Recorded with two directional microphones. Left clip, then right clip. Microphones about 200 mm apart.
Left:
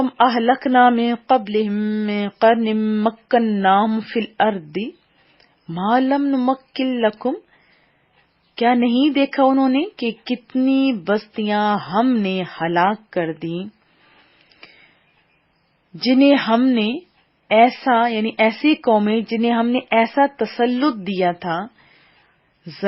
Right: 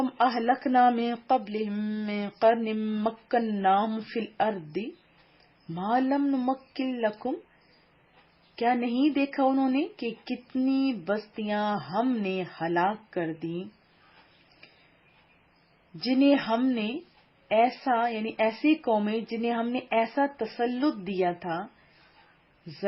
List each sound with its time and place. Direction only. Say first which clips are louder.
0.0 s speech: left 9 dB; 25° left (ahead or behind)
8.5 s speech: left 9 dB; 30° left (ahead or behind)
16.0 s speech: left 9 dB; 30° left (ahead or behind)